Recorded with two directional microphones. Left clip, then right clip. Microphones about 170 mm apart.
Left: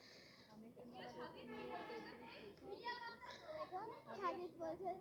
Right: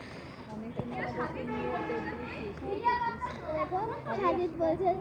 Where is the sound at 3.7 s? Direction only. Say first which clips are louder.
Right 17 dB; 85° right.